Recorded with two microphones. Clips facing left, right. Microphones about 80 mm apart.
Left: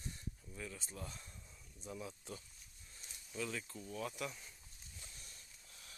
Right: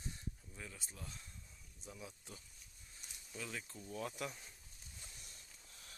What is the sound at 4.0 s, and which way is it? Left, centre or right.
Speech, right.